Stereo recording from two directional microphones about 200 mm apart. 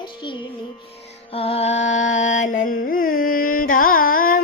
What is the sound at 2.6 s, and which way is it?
Carnatic music, 45° left (ahead or behind).